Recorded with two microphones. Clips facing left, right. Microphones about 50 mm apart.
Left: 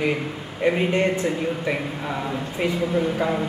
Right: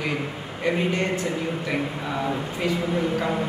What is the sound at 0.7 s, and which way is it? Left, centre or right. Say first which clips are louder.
Speech: left 3 dB; left.